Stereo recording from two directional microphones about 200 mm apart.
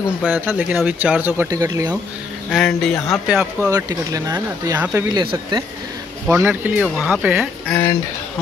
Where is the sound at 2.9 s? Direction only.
15° left (ahead or behind).